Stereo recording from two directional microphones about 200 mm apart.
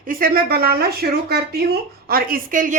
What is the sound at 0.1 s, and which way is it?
Speech, 45° right (ahead or behind).